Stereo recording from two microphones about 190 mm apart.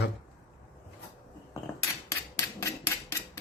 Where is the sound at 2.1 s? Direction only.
15° left (ahead or behind).